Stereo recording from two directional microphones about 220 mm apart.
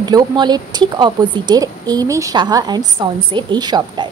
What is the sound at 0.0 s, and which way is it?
A woman's voice, 20° right (ahead or behind).